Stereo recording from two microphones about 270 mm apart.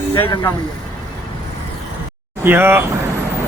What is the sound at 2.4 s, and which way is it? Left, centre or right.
Speech, centre.